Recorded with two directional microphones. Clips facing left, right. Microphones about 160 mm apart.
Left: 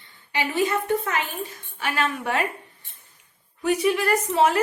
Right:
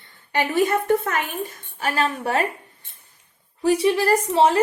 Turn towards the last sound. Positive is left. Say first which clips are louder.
# right 3 dB
turn(degrees=-30)  # may be behind; listen again after turning